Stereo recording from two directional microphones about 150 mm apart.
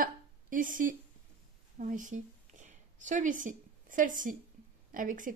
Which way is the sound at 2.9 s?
55° right (ahead or behind).